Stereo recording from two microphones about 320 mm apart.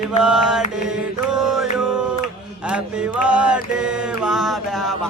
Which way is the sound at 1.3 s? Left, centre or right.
Centre.